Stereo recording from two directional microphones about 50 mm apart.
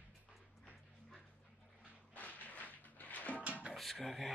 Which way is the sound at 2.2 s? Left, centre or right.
Left.